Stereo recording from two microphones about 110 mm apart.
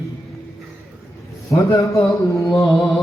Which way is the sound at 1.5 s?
30° left (ahead or behind).